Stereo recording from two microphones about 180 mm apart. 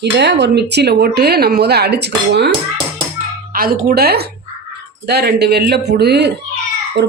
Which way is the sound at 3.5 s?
55° right (ahead or behind).